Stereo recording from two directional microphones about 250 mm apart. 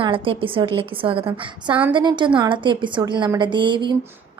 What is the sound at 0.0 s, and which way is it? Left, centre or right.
A woman's voice, right.